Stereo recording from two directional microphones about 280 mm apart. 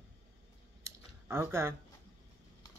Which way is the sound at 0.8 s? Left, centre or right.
Centre.